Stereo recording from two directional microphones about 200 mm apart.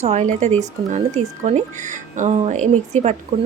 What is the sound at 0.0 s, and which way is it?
Speech, 35° right (ahead or behind).